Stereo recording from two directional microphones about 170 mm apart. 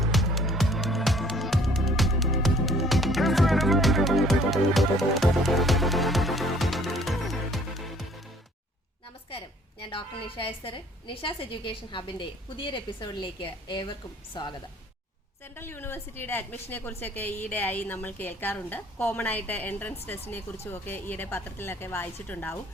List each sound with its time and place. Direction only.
0.0 s music: centre (ahead or behind)
9.9 s a woman's voice: 30° left (ahead or behind)
15.5 s a woman's voice: 15° left (ahead or behind)